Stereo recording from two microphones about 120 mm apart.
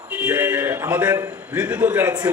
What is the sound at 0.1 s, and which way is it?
A man's voice, 15° right (ahead or behind).